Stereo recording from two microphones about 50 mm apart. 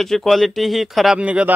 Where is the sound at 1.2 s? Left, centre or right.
Right.